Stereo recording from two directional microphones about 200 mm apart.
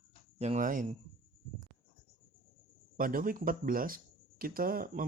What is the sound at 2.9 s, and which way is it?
Speech, 45° right (ahead or behind).